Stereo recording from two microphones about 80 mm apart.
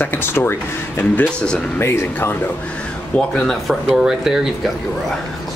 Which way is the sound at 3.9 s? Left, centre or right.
Centre.